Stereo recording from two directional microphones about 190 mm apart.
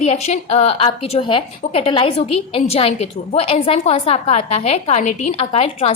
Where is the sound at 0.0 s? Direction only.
35° left (ahead or behind).